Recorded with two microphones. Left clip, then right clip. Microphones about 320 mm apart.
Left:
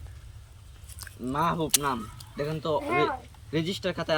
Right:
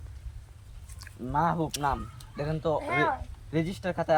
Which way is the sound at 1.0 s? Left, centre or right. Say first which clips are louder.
Left 4 dB; centre.